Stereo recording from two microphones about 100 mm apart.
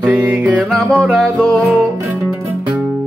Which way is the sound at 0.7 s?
5° left (ahead or behind).